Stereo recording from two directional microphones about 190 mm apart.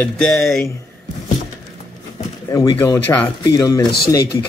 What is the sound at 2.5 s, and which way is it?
Speech, 15° left (ahead or behind).